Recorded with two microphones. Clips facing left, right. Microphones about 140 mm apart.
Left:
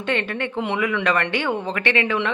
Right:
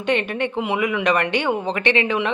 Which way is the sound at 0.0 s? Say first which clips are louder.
Right 3 dB; 15° right (ahead or behind).